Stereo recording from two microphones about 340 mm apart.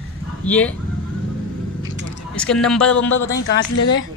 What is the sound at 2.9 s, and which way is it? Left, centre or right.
Speech, left.